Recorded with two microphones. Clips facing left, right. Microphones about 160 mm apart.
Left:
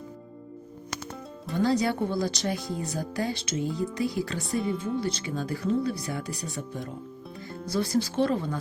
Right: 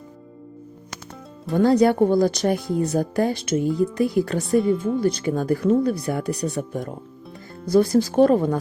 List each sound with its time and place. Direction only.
1.5 s speech: 50° right (ahead or behind)
4.4 s speech: centre (ahead or behind)
4.9 s speech: 50° right (ahead or behind)